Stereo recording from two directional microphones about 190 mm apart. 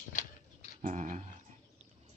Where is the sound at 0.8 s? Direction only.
40° right (ahead or behind).